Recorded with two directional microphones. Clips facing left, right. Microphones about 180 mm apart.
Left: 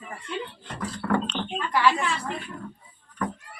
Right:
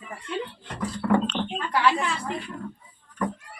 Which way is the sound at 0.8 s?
10° right (ahead or behind).